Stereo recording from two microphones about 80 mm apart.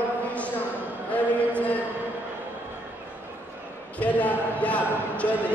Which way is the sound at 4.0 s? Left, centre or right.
Centre.